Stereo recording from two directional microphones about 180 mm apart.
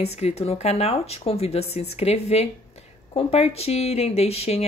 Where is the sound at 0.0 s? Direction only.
35° left (ahead or behind).